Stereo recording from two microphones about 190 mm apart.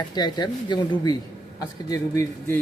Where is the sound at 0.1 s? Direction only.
20° left (ahead or behind).